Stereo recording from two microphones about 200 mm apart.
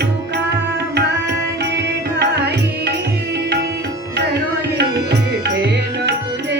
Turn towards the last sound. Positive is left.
turn(degrees=-60)  # may be behind; listen again after turning